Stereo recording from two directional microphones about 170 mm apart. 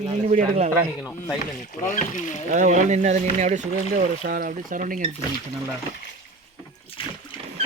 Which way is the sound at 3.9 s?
55° right (ahead or behind).